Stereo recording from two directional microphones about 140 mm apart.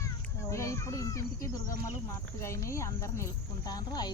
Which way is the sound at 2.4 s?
20° left (ahead or behind).